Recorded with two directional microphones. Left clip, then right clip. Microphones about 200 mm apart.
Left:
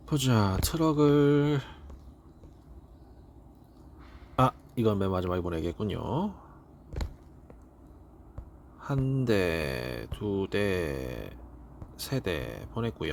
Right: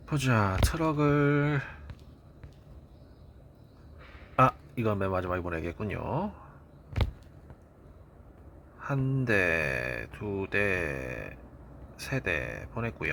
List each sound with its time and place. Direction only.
0.0 s speech: 35° left (ahead or behind)
4.4 s speech: 35° left (ahead or behind)
9.2 s speech: 35° left (ahead or behind)